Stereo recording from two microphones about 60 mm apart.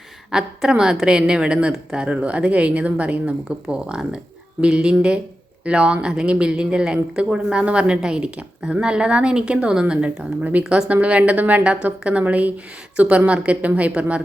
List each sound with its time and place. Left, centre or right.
0.3 s a woman's voice: centre